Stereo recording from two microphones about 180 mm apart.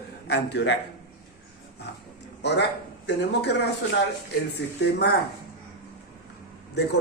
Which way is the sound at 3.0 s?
70° left (ahead or behind).